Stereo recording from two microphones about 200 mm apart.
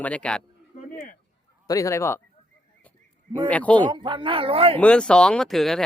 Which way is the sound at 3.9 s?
25° right (ahead or behind).